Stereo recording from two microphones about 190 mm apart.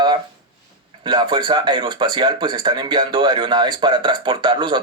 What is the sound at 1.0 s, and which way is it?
Speech, 25° right (ahead or behind).